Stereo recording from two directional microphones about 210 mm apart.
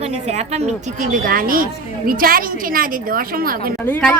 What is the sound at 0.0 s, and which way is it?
A woman's voice, 30° right (ahead or behind).